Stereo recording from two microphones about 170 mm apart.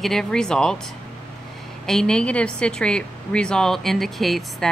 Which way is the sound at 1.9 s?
5° left (ahead or behind).